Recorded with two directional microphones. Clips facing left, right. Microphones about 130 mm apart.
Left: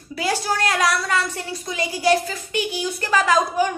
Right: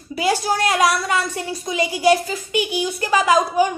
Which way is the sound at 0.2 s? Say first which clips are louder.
Right 3 dB; 15° right (ahead or behind).